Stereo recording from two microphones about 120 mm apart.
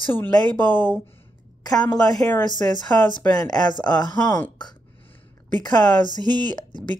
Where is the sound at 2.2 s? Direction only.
15° left (ahead or behind).